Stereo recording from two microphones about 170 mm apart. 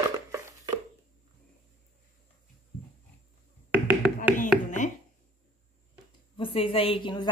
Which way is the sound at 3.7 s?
10° right (ahead or behind).